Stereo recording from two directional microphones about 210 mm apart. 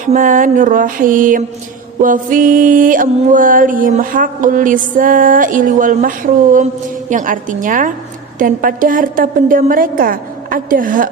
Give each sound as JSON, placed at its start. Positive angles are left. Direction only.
{"t": 0.0, "sound": "music", "side_deg": -40}